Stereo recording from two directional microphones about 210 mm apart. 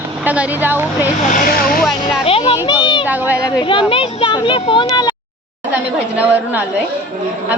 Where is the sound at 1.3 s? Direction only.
40° left (ahead or behind).